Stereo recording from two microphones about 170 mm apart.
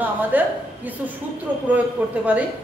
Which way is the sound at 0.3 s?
10° right (ahead or behind).